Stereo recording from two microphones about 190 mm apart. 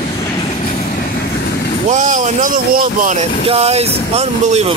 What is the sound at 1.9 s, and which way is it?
Speech, 40° right (ahead or behind).